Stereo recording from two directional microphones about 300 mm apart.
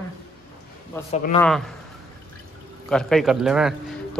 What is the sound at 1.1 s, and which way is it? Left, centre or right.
Speech, left.